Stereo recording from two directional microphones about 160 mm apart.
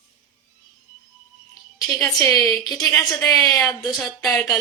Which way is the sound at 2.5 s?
25° left (ahead or behind).